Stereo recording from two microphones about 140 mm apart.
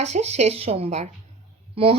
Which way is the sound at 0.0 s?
50° right (ahead or behind).